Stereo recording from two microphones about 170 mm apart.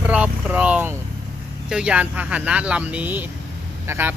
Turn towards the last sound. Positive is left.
turn(degrees=-15)  # may be behind; listen again after turning